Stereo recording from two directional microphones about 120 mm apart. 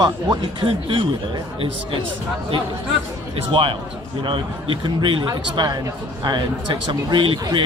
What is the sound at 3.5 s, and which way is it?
A man's voice, 45° right (ahead or behind).